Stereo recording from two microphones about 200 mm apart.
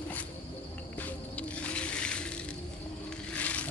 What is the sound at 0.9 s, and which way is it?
Music, 5° left (ahead or behind).